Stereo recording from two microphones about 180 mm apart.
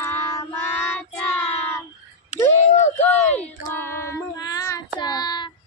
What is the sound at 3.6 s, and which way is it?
Child singing, 15° left (ahead or behind).